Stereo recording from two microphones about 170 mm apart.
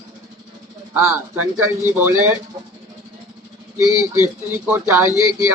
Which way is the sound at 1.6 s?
15° right (ahead or behind).